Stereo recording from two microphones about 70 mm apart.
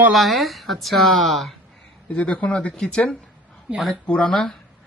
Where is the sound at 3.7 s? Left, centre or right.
Centre.